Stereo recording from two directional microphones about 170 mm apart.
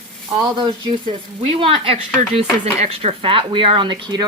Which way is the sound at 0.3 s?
25° right (ahead or behind).